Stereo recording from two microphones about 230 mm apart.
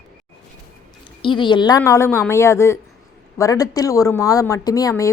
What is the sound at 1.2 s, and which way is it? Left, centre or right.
A woman's voice, left.